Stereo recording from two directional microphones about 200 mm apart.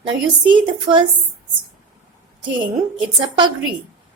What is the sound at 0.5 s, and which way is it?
Speech, 25° right (ahead or behind).